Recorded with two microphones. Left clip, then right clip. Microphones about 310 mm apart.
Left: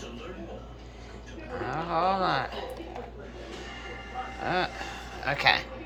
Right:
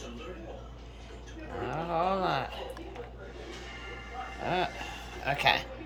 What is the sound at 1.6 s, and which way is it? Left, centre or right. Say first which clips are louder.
Speech: left 3 dB; centre.